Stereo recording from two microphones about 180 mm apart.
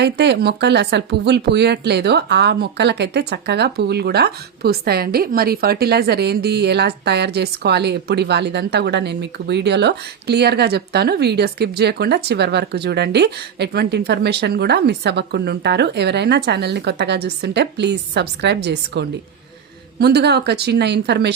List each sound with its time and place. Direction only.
0.0 s speech: 65° right (ahead or behind)